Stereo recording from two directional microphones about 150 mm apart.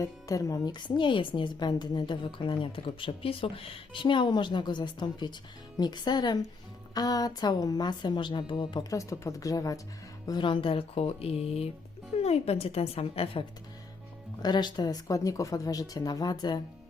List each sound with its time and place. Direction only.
0.0 s a woman's voice: 20° left (ahead or behind); by 13.4 s 40° left (ahead or behind)
14.4 s a woman's voice: 30° left (ahead or behind)